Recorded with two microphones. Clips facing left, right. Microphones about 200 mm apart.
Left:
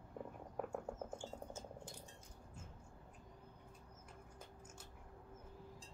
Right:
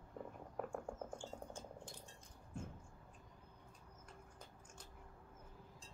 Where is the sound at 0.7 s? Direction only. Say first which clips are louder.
Left 1 dB; 5° left (ahead or behind).